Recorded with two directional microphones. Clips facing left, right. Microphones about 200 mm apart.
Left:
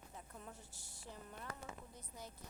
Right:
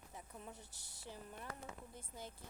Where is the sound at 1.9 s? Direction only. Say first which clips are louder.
Right 2 dB; 25° right (ahead or behind).